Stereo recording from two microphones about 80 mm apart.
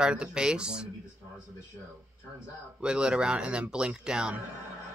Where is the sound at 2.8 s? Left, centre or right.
Centre.